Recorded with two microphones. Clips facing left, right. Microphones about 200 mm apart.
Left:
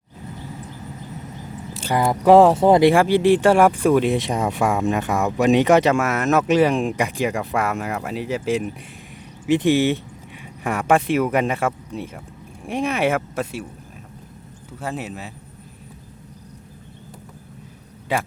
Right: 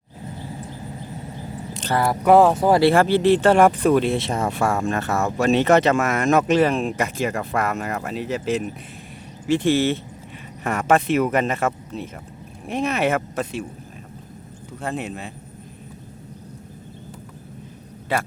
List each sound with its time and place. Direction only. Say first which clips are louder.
1.7 s speech: left 1 dB; 10° left (ahead or behind)
14.8 s speech: right 1 dB; 5° left (ahead or behind)
18.1 s speech: left 1 dB; 15° left (ahead or behind)